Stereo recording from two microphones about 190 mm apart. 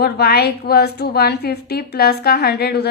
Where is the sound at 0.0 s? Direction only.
55° left (ahead or behind).